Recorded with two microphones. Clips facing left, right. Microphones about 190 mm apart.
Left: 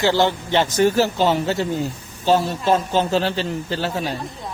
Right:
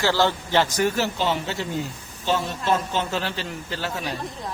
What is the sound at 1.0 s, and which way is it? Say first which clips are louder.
A man's voice: left 6 dB; 40° left (ahead or behind).